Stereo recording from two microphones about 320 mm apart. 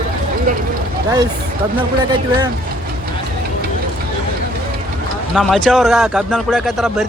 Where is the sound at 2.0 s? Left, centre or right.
Centre.